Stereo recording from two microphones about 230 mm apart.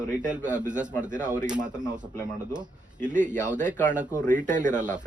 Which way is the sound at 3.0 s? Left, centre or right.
Right.